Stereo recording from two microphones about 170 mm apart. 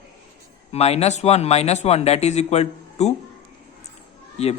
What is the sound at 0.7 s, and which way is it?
Speech, 40° left (ahead or behind).